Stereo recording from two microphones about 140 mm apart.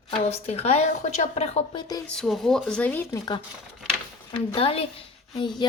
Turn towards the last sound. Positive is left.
turn(degrees=30)  # may be behind; listen again after turning